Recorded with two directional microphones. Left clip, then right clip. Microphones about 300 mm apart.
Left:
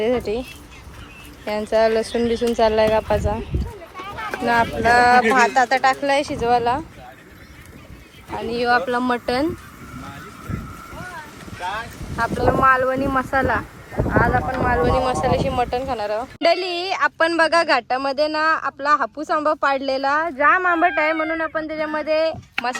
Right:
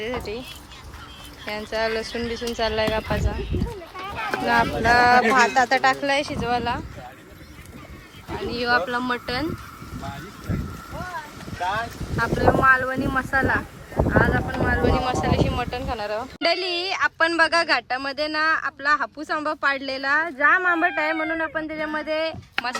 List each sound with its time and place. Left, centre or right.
0.0 s speech: centre
1.5 s speech: centre
4.0 s run: right
4.4 s speech: centre
8.4 s speech: centre
12.1 s speech: centre